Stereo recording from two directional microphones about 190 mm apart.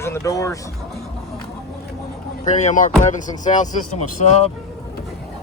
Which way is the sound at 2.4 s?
40° left (ahead or behind).